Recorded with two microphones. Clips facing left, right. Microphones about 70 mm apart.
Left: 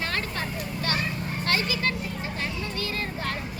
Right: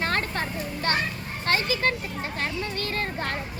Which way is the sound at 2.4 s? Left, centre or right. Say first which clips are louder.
Right 3 dB; right.